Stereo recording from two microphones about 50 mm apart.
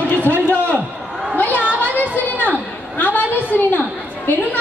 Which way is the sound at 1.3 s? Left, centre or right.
Left.